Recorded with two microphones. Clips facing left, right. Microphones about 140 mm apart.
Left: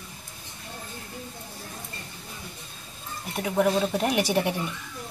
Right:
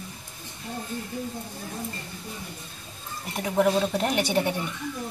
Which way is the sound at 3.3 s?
Centre (ahead or behind).